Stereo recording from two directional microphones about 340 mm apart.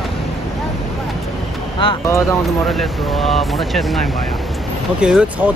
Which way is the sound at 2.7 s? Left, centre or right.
Centre.